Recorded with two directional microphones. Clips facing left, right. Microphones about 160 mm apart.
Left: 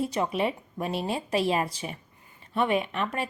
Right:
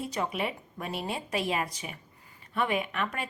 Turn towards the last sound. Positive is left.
turn(degrees=25)  # may be behind; listen again after turning